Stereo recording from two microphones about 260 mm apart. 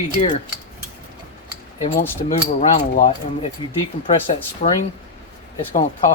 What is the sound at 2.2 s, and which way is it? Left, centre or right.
Speech, left.